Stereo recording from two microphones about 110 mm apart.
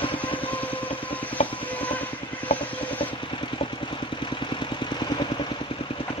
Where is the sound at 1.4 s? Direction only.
75° left (ahead or behind).